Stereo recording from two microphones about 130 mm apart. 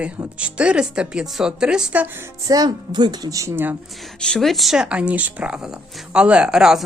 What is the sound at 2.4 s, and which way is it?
A woman's voice, 30° right (ahead or behind).